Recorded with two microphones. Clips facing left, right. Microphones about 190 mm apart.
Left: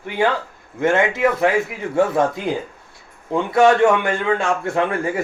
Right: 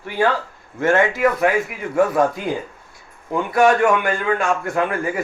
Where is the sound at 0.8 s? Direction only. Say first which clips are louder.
Even; 20° left (ahead or behind).